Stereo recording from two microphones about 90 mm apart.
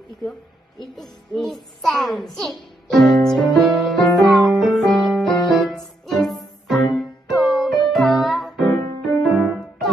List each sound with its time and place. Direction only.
0.2 s a child's voice: centre (ahead or behind)
3.6 s music: centre (ahead or behind)
8.6 s music: 40° left (ahead or behind)
9.2 s music: centre (ahead or behind)